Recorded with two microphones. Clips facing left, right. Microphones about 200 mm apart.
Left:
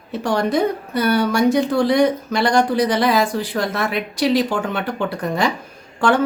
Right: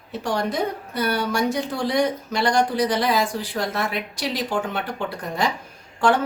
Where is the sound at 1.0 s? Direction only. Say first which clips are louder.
Left 6 dB; 70° left (ahead or behind).